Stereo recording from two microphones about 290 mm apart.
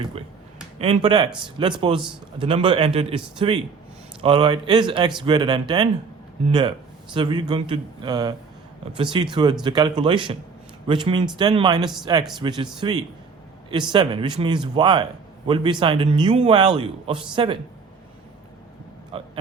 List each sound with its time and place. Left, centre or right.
0.8 s a man's voice: centre
19.1 s speech: centre